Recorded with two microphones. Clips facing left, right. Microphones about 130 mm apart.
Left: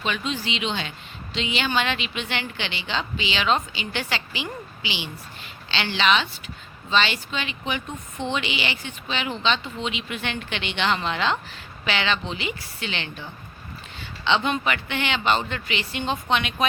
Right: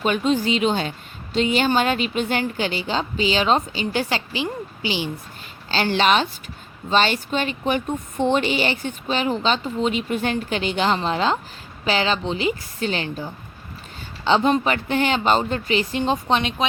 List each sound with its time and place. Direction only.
0.0 s a woman's voice: 45° right (ahead or behind)